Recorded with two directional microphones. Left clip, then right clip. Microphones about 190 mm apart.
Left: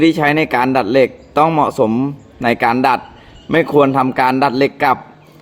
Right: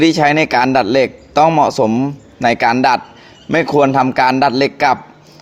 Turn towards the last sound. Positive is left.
turn(degrees=-15)  # may be behind; listen again after turning